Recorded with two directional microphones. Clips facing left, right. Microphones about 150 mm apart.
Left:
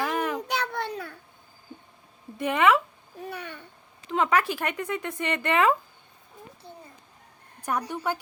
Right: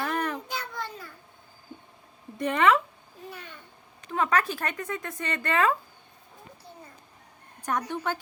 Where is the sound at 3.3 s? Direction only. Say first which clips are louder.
Left 6 dB; 65° left (ahead or behind).